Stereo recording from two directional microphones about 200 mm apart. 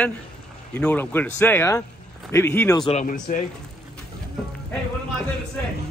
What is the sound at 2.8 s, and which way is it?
Speech, 35° left (ahead or behind).